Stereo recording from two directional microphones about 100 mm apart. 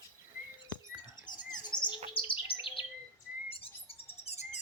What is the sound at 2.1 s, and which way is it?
Chirp, 60° left (ahead or behind).